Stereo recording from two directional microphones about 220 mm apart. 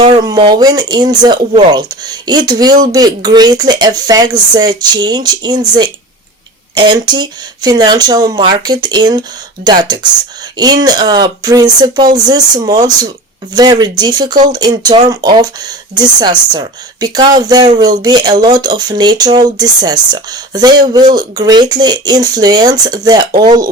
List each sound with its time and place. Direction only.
0.0 s speech: 20° right (ahead or behind)